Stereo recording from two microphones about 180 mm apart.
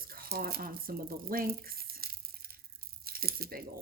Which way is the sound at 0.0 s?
55° right (ahead or behind).